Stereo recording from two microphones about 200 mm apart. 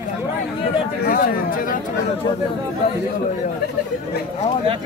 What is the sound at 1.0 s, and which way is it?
Speech, 45° left (ahead or behind).